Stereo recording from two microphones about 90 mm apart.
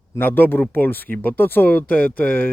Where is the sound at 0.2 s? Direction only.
20° left (ahead or behind).